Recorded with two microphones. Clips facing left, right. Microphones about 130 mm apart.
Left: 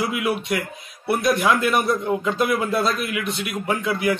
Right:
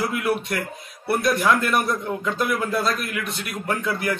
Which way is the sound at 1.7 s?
5° left (ahead or behind).